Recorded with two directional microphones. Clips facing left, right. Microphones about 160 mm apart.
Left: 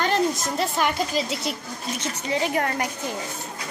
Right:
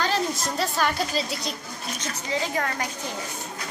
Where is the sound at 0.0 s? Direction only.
20° left (ahead or behind).